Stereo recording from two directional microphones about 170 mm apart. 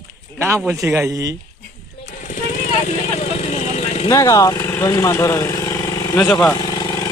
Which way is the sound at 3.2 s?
40° left (ahead or behind).